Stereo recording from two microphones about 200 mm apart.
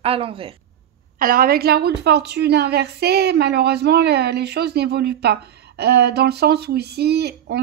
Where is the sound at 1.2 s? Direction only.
45° right (ahead or behind).